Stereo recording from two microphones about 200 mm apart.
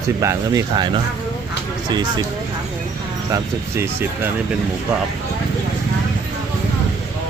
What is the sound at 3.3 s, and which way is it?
Speech, 10° right (ahead or behind).